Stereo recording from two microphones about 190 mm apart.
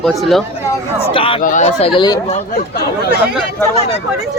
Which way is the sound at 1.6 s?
30° left (ahead or behind).